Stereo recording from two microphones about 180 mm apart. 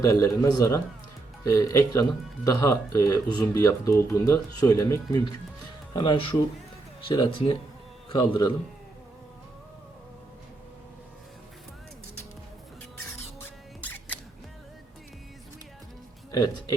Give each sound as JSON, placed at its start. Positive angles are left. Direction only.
{"t": 0.0, "sound": "a man's voice", "side_deg": 15}
{"t": 16.3, "sound": "a man's voice", "side_deg": 20}